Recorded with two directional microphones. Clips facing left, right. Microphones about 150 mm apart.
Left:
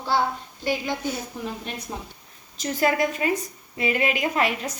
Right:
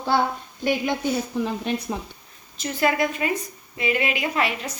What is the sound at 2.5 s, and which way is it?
A woman's voice, 40° left (ahead or behind).